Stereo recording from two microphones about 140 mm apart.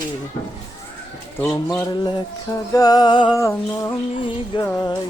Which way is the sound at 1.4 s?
20° left (ahead or behind).